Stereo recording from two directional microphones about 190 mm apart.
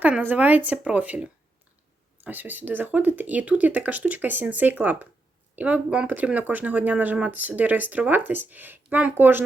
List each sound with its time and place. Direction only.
0.0 s speech: 10° right (ahead or behind)